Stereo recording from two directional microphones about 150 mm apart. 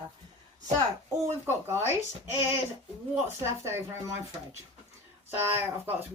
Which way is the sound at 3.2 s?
15° right (ahead or behind).